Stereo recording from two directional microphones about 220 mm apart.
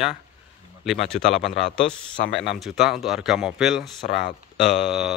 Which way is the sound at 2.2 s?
45° left (ahead or behind).